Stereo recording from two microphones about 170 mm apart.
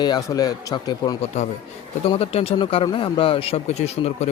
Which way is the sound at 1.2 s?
40° left (ahead or behind).